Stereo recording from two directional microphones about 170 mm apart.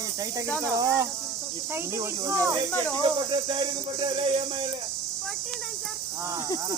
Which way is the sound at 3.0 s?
30° right (ahead or behind).